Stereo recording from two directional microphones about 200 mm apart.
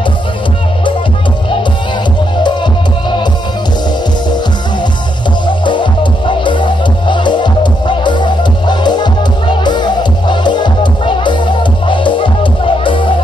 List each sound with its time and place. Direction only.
2.4 s music: 20° left (ahead or behind)
5.7 s music: 25° left (ahead or behind)